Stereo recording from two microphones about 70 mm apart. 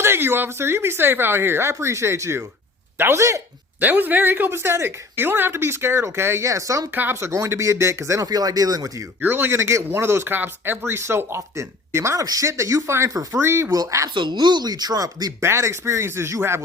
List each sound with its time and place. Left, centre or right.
0.0 s speech: right
3.8 s speech: right
6.5 s speech: right
6.9 s speech: right
8.3 s speech: right
9.2 s speech: right
12.2 s speech: right
14.1 s speech: right
15.4 s speech: right